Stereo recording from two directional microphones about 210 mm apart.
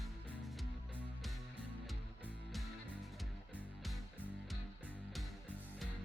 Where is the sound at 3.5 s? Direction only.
Centre (ahead or behind).